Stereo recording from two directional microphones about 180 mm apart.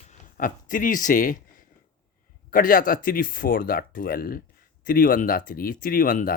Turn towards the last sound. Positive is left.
turn(degrees=50)  # may be behind; listen again after turning